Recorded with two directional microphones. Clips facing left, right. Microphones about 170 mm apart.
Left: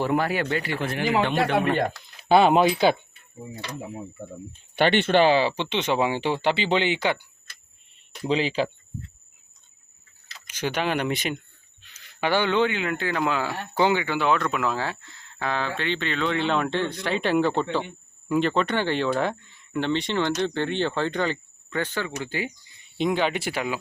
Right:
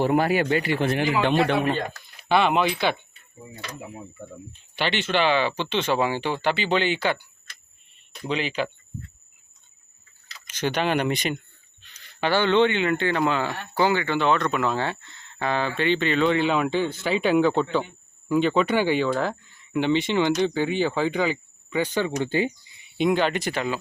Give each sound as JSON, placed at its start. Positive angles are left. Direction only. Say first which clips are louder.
{"t": 0.0, "sound": "a man's voice", "louder": "right 3 dB", "side_deg": -20}
{"t": 2.3, "sound": "speech", "louder": "left 4 dB", "side_deg": 35}
{"t": 4.5, "sound": "speech", "louder": "left 6 dB", "side_deg": 55}
{"t": 5.3, "sound": "speech", "louder": "left 1 dB", "side_deg": 30}
{"t": 8.3, "sound": "speech", "louder": "left 3 dB", "side_deg": 30}
{"t": 10.4, "sound": "speech", "louder": "right 2 dB", "side_deg": 10}
{"t": 13.7, "sound": "speech", "louder": "even", "side_deg": 15}
{"t": 22.8, "sound": "speech", "louder": "right 2 dB", "side_deg": -5}